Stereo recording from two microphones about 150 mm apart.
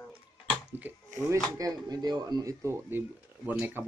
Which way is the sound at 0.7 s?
15° right (ahead or behind).